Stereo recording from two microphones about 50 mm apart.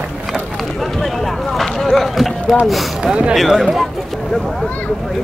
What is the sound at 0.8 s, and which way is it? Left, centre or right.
Speech, centre.